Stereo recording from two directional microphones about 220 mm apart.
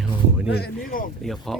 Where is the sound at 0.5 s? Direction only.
45° left (ahead or behind).